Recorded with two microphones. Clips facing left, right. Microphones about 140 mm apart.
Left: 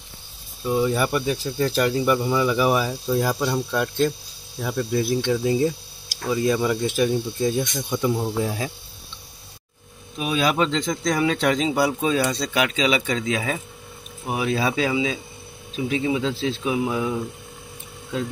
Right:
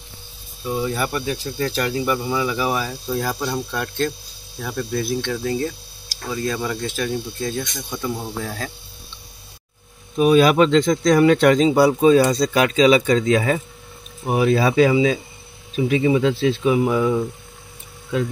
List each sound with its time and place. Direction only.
0.7 s speech: centre (ahead or behind)
10.1 s speech: 45° right (ahead or behind)
10.5 s speech: 60° right (ahead or behind)
11.6 s speech: 40° right (ahead or behind); by 17.1 s 80° right